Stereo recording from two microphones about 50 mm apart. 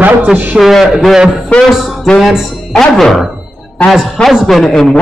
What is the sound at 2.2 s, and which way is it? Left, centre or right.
Speech, centre.